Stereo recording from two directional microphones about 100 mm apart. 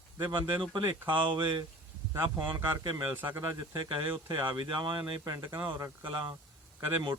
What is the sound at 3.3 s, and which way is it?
Speech, 35° right (ahead or behind).